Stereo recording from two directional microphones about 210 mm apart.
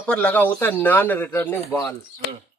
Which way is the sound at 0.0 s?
5° left (ahead or behind).